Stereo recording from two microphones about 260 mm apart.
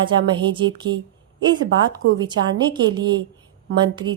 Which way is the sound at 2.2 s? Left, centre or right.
Centre.